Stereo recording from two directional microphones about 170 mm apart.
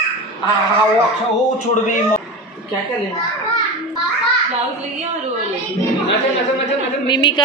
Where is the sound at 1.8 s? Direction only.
50° left (ahead or behind).